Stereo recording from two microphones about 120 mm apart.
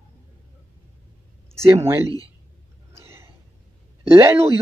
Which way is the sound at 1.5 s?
20° right (ahead or behind).